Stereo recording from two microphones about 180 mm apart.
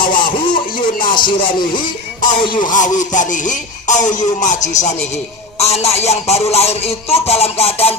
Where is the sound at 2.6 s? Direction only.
45° left (ahead or behind).